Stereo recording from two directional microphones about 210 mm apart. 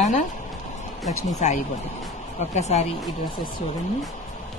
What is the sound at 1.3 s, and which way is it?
Speech, 35° left (ahead or behind).